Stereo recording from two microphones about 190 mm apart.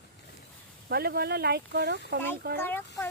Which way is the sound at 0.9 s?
55° right (ahead or behind).